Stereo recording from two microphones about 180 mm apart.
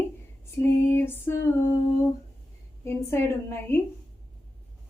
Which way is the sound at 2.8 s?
15° left (ahead or behind).